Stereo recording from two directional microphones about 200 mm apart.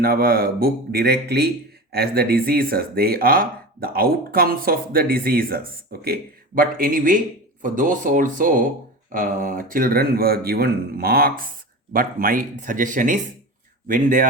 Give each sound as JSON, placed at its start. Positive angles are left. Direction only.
{"t": 0.0, "sound": "speech", "side_deg": -50}